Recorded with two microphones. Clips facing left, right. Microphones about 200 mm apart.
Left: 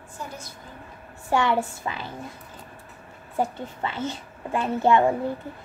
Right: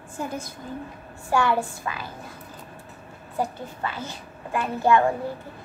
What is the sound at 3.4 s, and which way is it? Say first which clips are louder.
A woman's voice: left 1 dB; 25° left (ahead or behind).